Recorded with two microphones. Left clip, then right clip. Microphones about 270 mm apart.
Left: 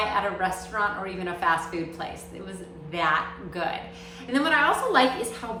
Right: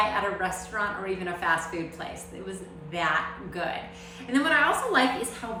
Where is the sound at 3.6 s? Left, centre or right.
Centre.